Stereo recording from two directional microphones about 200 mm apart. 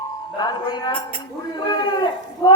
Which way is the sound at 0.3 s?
20° left (ahead or behind).